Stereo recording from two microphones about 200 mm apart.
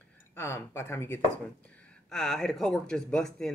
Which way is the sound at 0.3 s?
10° left (ahead or behind).